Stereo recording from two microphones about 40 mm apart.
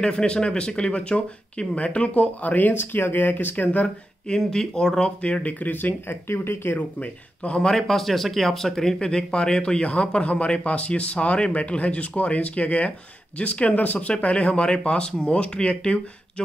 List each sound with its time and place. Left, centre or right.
0.0 s speech: left
2.7 s speech: left
4.4 s speech: centre
5.2 s speech: left
6.0 s speech: left
7.0 s speech: left
7.7 s speech: centre; by 16.0 s left